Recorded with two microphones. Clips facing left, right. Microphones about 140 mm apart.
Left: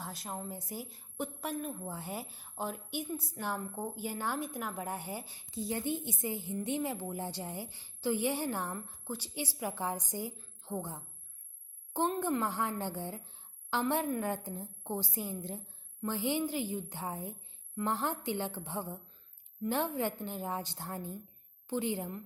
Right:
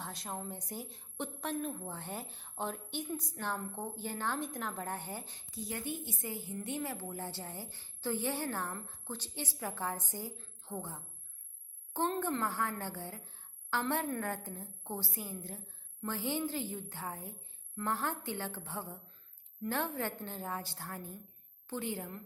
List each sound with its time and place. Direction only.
0.0 s a woman's voice: centre (ahead or behind)
5.5 s a woman's voice: 25° left (ahead or behind)